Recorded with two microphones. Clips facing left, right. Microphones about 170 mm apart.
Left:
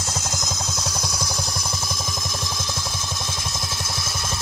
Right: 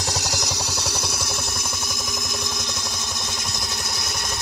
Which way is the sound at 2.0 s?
20° right (ahead or behind).